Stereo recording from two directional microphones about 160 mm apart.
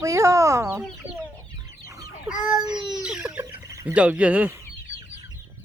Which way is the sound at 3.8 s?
10° right (ahead or behind).